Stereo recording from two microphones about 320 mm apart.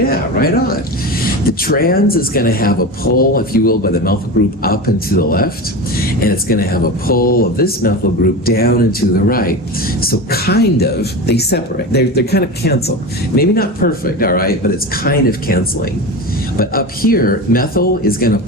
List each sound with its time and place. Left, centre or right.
0.0 s speech: left